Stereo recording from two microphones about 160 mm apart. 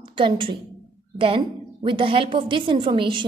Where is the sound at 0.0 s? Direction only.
30° right (ahead or behind).